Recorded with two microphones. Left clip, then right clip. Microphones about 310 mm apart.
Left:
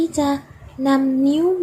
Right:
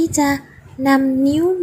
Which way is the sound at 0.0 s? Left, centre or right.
Centre.